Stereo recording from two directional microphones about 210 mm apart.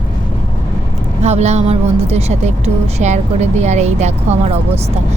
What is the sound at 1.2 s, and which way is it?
A woman's voice, 30° right (ahead or behind).